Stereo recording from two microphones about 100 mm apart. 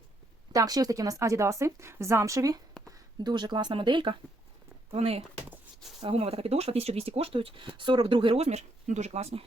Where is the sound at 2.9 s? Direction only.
45° right (ahead or behind).